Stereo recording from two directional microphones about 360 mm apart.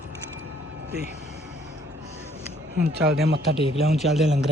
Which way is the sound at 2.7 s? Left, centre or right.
Right.